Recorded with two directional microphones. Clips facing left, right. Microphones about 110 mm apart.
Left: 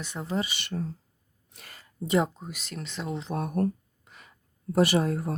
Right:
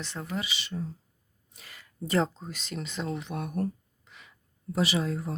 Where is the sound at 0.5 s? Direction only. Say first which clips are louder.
Left 2 dB; 60° left (ahead or behind).